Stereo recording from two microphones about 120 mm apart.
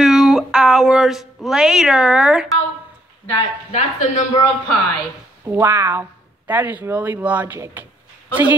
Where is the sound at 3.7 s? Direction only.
90° left.